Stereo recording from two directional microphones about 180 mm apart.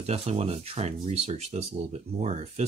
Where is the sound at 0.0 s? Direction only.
35° right (ahead or behind).